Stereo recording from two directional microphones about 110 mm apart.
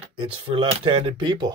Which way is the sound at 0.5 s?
55° right (ahead or behind).